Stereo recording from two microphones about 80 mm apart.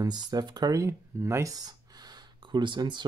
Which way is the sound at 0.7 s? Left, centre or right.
Right.